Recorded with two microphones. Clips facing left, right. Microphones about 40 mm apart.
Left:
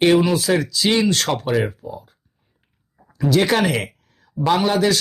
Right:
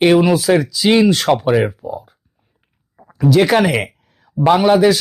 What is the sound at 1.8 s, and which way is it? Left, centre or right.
Speech, centre.